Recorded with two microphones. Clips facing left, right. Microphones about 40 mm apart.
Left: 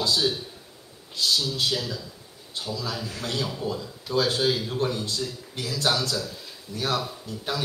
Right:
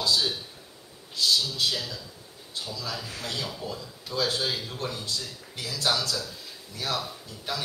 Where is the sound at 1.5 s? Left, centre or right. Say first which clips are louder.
Left 2 dB; centre.